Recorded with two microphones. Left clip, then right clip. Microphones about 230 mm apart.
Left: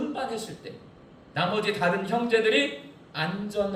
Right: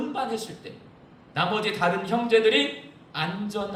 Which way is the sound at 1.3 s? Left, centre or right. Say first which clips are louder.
Right 1 dB; right.